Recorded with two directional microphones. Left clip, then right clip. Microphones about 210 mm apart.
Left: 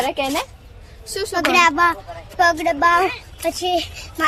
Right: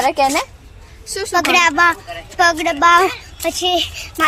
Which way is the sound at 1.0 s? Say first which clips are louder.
Right 1 dB; 30° left (ahead or behind).